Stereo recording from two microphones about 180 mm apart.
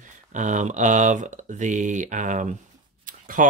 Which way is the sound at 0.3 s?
45° right (ahead or behind).